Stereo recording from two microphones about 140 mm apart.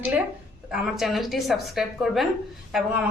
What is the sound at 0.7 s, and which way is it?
A woman's voice, centre (ahead or behind).